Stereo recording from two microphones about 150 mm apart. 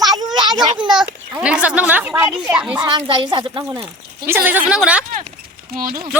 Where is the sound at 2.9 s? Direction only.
35° right (ahead or behind).